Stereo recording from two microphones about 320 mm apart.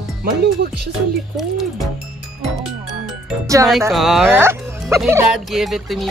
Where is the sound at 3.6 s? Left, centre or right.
Centre.